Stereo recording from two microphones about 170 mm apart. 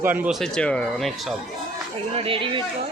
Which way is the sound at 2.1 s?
35° right (ahead or behind).